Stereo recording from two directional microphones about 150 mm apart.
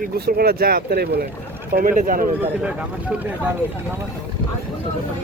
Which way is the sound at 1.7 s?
65° right (ahead or behind).